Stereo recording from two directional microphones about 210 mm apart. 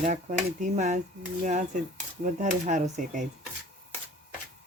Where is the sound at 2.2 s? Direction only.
35° right (ahead or behind).